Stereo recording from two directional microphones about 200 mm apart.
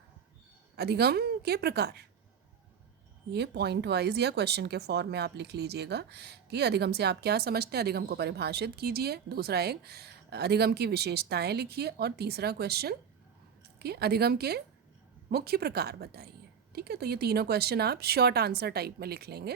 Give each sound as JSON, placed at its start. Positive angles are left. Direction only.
{"t": 0.8, "sound": "speech", "side_deg": -55}
{"t": 3.3, "sound": "speech", "side_deg": -55}